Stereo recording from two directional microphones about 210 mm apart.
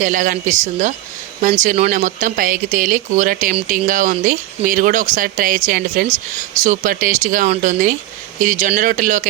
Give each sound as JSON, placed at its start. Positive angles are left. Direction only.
{"t": 0.0, "sound": "speech", "side_deg": -40}